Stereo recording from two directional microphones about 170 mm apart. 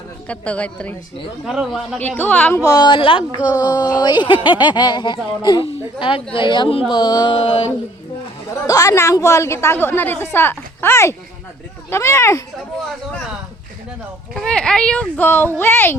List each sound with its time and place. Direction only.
0.3 s a woman's voice: 10° left (ahead or behind)
2.6 s a woman's voice: 25° left (ahead or behind)
8.6 s a woman's voice: 20° left (ahead or behind)
14.3 s a woman's voice: 5° left (ahead or behind)